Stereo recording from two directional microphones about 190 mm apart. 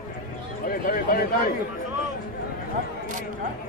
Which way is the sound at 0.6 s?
50° left (ahead or behind).